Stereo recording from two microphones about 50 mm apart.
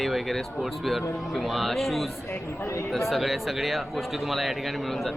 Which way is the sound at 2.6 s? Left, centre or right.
Left.